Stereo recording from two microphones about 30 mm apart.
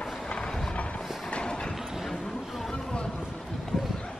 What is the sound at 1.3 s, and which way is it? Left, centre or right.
Train, left.